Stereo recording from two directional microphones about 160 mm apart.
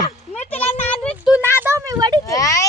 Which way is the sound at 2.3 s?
20° left (ahead or behind).